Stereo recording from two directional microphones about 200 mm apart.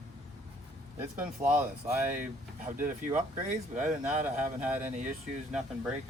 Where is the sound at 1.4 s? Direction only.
35° right (ahead or behind).